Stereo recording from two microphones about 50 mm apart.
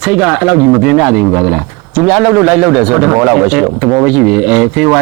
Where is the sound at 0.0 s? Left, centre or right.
Centre.